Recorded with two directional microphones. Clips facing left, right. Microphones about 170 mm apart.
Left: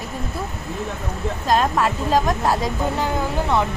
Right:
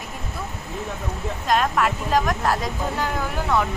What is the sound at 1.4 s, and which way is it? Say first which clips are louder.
A woman's voice: left 2 dB; 30° left (ahead or behind).